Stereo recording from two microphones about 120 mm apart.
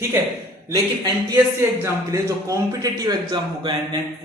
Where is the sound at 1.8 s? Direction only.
25° right (ahead or behind).